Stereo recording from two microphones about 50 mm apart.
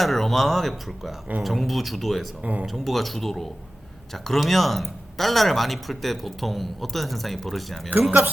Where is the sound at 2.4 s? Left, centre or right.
Right.